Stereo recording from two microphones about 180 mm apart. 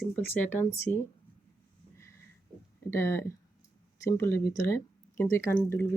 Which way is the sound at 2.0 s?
15° left (ahead or behind).